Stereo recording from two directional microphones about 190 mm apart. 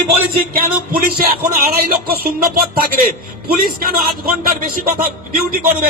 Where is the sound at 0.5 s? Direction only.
50° right (ahead or behind).